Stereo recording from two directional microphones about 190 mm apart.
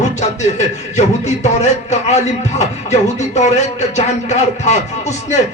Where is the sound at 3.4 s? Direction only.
35° left (ahead or behind).